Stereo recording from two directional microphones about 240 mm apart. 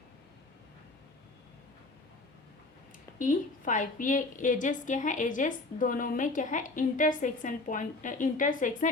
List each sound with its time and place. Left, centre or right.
3.2 s a woman's voice: left